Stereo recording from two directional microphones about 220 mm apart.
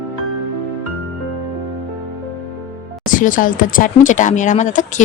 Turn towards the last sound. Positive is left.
turn(degrees=35)  # may be behind; listen again after turning